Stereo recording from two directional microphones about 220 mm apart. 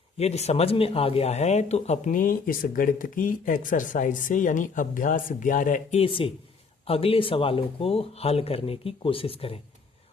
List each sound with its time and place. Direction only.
0.2 s speech: 30° left (ahead or behind)